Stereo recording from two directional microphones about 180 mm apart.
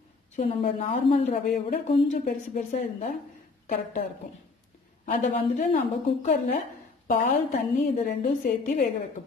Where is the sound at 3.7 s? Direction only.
55° left (ahead or behind).